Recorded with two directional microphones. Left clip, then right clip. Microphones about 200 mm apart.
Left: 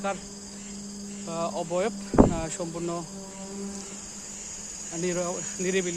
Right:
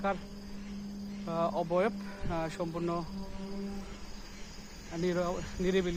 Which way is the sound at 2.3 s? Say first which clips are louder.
Left 3 dB; 5° right (ahead or behind).